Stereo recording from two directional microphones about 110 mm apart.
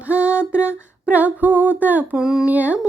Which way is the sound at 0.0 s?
10° right (ahead or behind).